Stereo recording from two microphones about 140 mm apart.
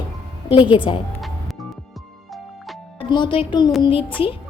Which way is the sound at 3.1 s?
35° left (ahead or behind).